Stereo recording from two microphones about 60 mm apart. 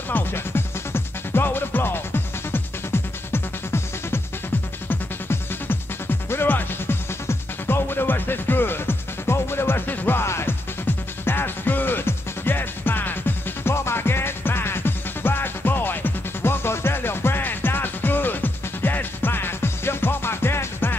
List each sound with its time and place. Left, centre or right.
0.1 s music: left
10.2 s music: left
11.2 s music: left